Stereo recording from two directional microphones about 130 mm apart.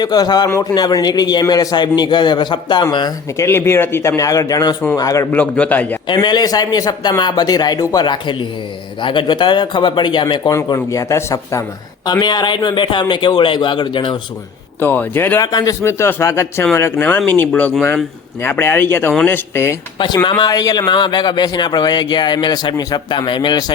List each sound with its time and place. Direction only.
0.0 s speech: 30° left (ahead or behind)
3.4 s speech: 20° left (ahead or behind)
5.3 s speech: 10° left (ahead or behind)
6.1 s speech: 35° left (ahead or behind)
10.7 s speech: 25° left (ahead or behind)
12.2 s speech: 35° left (ahead or behind)
14.8 s speech: 15° left (ahead or behind)
20.2 s speech: 30° left (ahead or behind)